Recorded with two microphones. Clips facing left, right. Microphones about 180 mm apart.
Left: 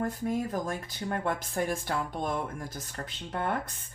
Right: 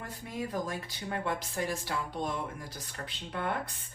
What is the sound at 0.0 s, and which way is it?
Speech, 45° left (ahead or behind).